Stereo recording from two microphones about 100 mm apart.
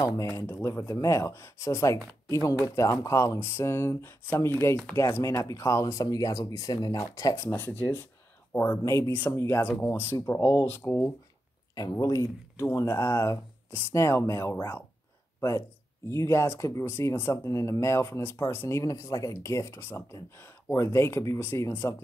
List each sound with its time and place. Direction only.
0.0 s speech: 40° left (ahead or behind)
0.4 s speech: 25° left (ahead or behind)
16.1 s speech: 30° left (ahead or behind)